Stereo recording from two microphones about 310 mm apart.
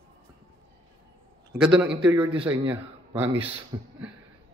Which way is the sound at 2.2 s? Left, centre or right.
Centre.